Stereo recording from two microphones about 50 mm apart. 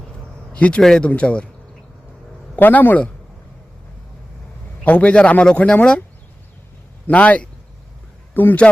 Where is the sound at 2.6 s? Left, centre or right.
Left.